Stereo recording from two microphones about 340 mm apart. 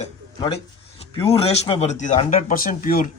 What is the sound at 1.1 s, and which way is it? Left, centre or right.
A man's voice, centre.